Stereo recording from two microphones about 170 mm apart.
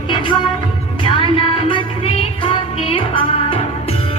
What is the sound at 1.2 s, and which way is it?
Music, 30° left (ahead or behind).